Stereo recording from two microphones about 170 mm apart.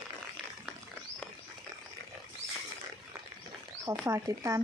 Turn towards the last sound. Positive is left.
turn(degrees=-20)  # may be behind; listen again after turning